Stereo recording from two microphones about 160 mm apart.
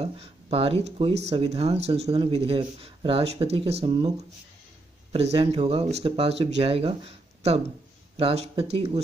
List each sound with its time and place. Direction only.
0.0 s speech: 35° right (ahead or behind)
3.8 s speech: 25° right (ahead or behind)
5.1 s speech: 40° right (ahead or behind)